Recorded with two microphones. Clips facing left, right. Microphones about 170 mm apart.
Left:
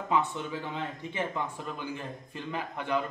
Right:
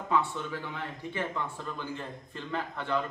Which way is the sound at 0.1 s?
15° left (ahead or behind).